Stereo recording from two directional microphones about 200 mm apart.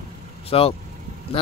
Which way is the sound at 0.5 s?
25° left (ahead or behind).